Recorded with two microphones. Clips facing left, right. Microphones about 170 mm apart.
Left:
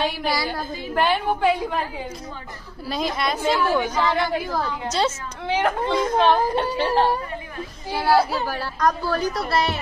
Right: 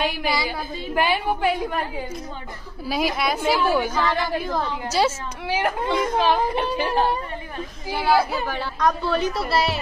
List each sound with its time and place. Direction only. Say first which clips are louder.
0.0 s a woman's voice: even; centre (ahead or behind)
2.9 s a woman's voice: right 1 dB; 5° right (ahead or behind)
3.9 s a woman's voice: left 1 dB; 15° left (ahead or behind)
4.8 s a woman's voice: right 2 dB; 5° right (ahead or behind)
7.9 s a woman's voice: left 1 dB; 5° right (ahead or behind)